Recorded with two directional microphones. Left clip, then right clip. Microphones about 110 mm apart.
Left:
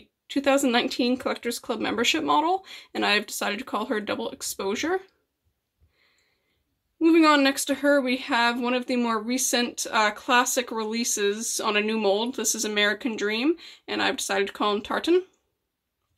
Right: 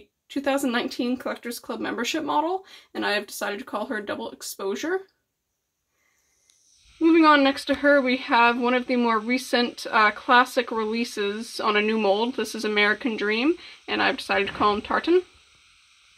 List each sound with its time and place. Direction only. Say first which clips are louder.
0.3 s speech: left 3 dB; 40° left (ahead or behind)
7.0 s speech: right 2 dB; 10° left (ahead or behind)